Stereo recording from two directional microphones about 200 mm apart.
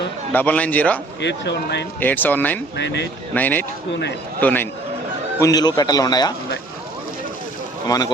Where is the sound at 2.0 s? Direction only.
10° left (ahead or behind).